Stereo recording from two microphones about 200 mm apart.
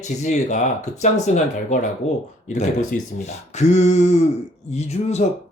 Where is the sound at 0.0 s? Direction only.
35° left (ahead or behind).